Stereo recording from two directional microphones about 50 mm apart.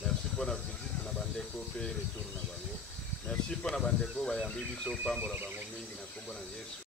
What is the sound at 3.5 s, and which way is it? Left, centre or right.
Speech, centre.